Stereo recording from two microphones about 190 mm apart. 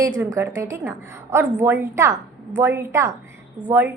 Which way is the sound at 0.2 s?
15° right (ahead or behind).